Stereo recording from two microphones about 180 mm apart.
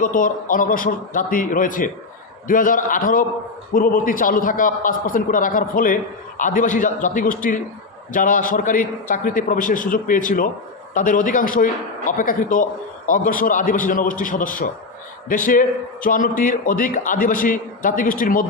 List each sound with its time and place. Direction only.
0.0 s a man's voice: 50° left (ahead or behind)